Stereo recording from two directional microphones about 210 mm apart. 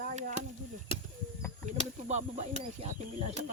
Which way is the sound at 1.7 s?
30° right (ahead or behind).